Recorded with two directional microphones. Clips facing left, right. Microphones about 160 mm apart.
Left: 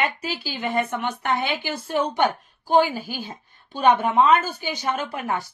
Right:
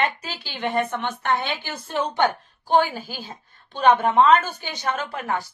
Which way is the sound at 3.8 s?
10° left (ahead or behind).